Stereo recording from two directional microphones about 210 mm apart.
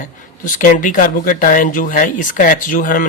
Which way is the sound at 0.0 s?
40° left (ahead or behind).